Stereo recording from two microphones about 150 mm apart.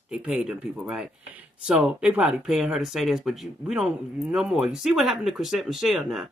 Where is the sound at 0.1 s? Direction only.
5° right (ahead or behind).